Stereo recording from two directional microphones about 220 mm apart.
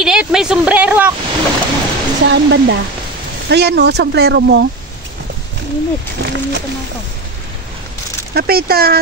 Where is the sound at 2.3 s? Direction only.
50° right (ahead or behind).